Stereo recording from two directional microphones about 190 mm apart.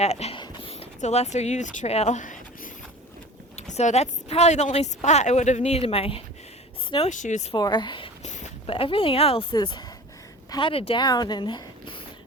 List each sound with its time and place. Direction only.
0.0 s speech: 35° left (ahead or behind)
3.5 s speech: 35° left (ahead or behind)
7.5 s speech: 25° left (ahead or behind)
8.3 s a woman's voice: 40° left (ahead or behind)